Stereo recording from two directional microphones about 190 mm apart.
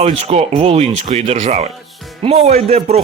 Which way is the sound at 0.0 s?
30° right (ahead or behind).